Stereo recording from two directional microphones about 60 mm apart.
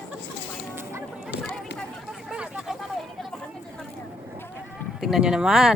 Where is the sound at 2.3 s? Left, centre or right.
Centre.